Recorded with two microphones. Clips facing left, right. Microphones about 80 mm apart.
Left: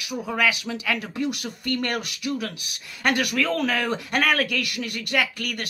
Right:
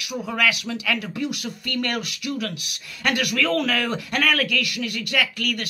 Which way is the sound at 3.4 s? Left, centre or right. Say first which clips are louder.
Right 1 dB; centre.